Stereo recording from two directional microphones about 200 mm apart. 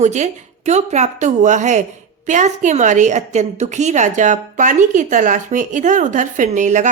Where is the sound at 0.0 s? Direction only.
35° right (ahead or behind).